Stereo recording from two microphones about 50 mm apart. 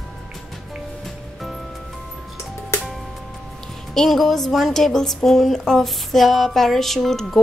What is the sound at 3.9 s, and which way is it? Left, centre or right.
Child singing, centre.